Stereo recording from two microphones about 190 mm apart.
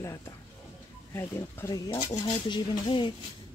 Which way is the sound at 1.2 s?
15° left (ahead or behind).